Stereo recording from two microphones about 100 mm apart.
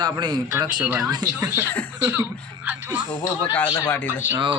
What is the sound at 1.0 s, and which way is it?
Speech, 35° right (ahead or behind).